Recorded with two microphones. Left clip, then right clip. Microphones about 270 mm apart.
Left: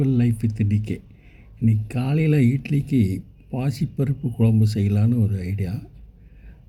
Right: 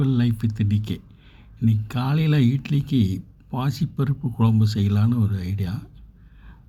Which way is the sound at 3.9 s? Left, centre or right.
Right.